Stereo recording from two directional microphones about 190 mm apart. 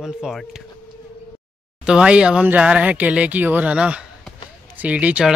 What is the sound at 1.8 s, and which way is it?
Speech, 5° right (ahead or behind).